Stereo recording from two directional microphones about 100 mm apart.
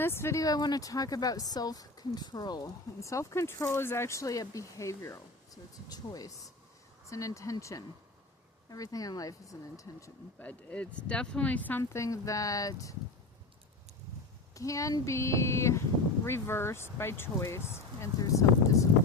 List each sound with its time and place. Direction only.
0.0 s speech: 25° left (ahead or behind)
10.4 s speech: 15° left (ahead or behind)
11.8 s speech: 30° left (ahead or behind)
14.5 s speech: 35° left (ahead or behind)